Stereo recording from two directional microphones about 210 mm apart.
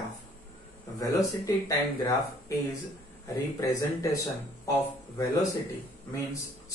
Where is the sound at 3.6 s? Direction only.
15° left (ahead or behind).